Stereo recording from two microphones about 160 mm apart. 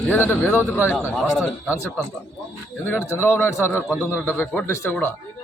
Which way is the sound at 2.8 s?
15° left (ahead or behind).